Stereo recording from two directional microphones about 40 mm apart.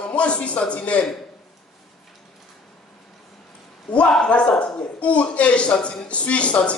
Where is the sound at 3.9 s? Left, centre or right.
Left.